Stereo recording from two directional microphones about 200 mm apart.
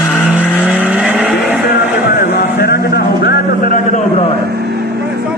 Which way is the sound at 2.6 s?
50° left (ahead or behind).